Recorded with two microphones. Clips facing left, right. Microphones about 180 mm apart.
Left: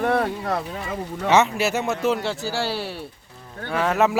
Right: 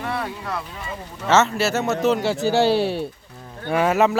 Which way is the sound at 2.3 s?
20° right (ahead or behind).